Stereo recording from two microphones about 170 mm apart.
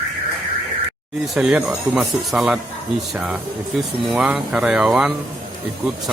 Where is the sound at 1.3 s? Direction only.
5° right (ahead or behind).